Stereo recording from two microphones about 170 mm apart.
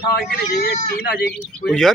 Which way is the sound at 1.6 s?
Centre (ahead or behind).